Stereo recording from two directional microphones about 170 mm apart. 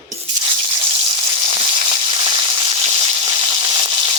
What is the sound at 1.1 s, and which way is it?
Frying, 25° right (ahead or behind).